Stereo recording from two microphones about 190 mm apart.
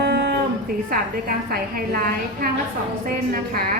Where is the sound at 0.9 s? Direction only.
50° right (ahead or behind).